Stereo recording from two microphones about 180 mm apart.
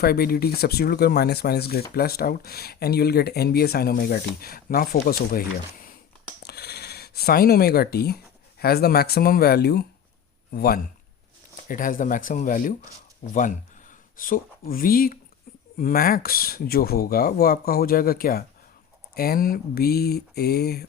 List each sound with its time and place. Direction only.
0.0 s speech: 60° left (ahead or behind)
6.4 s a sound: 65° left (ahead or behind)
8.5 s speech: 60° left (ahead or behind)
11.7 s speech: 50° left (ahead or behind)